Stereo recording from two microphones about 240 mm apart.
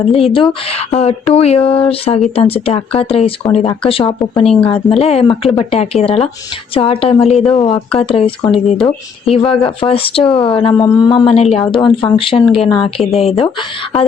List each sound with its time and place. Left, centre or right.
0.3 s speech: left
7.3 s speech: centre
7.6 s speech: left